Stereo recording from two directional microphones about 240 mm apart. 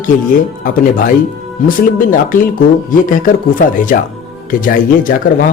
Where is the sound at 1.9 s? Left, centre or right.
Left.